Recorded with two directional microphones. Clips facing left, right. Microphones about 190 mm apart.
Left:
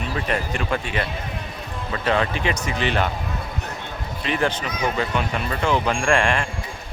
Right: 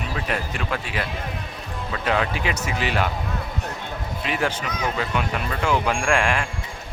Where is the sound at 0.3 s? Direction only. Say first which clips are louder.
Left 3 dB; 5° right (ahead or behind).